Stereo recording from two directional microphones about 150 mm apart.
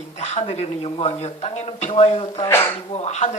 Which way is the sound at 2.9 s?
45° left (ahead or behind).